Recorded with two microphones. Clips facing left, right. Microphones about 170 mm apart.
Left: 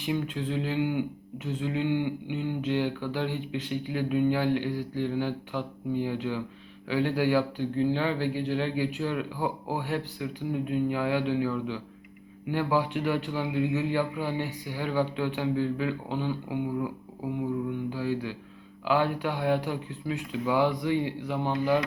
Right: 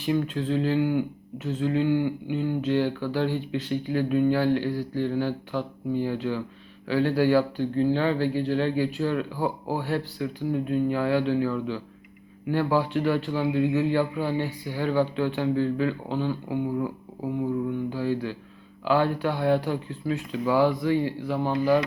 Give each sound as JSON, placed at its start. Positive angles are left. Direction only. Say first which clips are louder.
{"t": 0.0, "sound": "speech", "louder": "right 4 dB", "side_deg": 15}
{"t": 17.9, "sound": "speech", "louder": "right 3 dB", "side_deg": 15}